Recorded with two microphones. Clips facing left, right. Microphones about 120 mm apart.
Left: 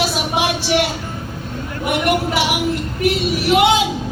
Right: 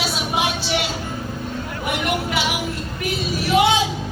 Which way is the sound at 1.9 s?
65° left (ahead or behind).